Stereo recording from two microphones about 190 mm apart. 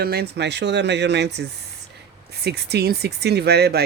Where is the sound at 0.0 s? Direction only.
55° right (ahead or behind).